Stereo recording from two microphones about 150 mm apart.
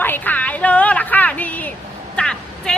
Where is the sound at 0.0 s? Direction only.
10° left (ahead or behind).